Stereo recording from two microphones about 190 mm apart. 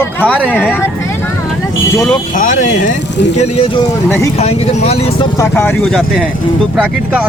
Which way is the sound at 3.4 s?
30° left (ahead or behind).